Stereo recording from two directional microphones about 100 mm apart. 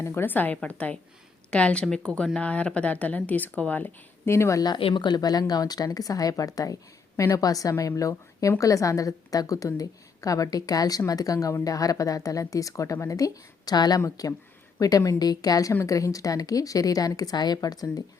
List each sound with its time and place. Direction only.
0.0 s speech: 25° left (ahead or behind)
4.8 s a woman's voice: 55° left (ahead or behind); by 18.0 s 40° left (ahead or behind)